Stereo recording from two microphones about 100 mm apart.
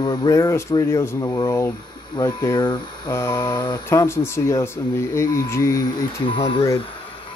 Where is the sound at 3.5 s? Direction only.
45° left (ahead or behind).